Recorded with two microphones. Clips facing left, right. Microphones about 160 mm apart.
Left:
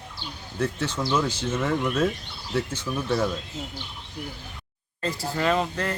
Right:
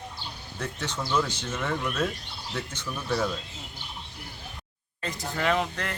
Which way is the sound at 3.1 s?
20° left (ahead or behind).